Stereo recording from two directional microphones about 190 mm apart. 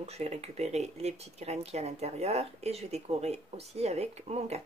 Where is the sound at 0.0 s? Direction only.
35° right (ahead or behind).